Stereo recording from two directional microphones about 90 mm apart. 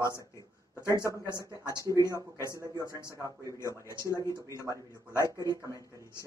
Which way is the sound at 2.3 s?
30° left (ahead or behind).